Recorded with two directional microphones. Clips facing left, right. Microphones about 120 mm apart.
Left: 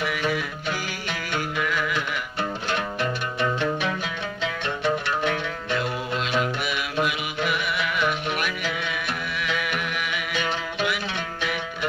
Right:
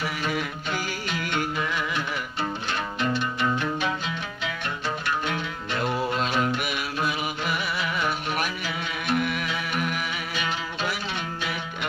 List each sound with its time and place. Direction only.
1.6 s music: 25° right (ahead or behind)
6.2 s music: 45° right (ahead or behind)
7.7 s music: 35° right (ahead or behind)
9.2 s music: 50° right (ahead or behind)
9.6 s music: 40° right (ahead or behind)